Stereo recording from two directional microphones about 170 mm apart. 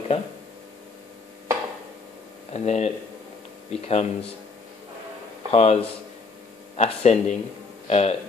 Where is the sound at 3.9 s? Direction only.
40° left (ahead or behind).